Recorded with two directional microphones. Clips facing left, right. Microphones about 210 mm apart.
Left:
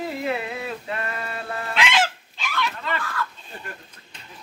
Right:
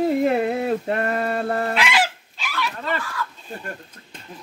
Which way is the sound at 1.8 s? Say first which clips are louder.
Right 1 dB; 5° right (ahead or behind).